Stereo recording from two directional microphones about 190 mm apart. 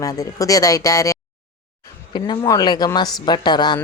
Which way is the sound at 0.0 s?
20° left (ahead or behind).